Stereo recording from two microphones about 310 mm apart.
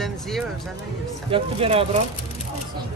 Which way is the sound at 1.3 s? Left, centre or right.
Centre.